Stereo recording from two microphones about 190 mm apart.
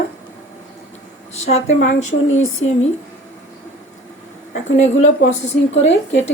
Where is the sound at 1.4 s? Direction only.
35° left (ahead or behind).